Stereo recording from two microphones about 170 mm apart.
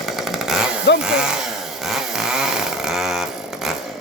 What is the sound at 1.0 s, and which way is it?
Speech, 5° right (ahead or behind).